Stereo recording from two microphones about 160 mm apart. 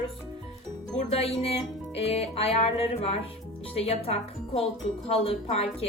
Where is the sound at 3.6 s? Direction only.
40° left (ahead or behind).